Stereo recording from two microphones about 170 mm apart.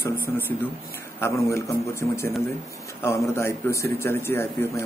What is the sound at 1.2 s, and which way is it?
A man's voice, 15° left (ahead or behind).